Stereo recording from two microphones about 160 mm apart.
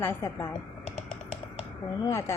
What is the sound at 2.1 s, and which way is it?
Speech, 15° left (ahead or behind).